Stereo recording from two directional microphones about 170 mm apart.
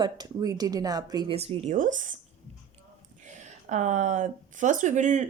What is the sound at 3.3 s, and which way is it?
Speech, 45° right (ahead or behind).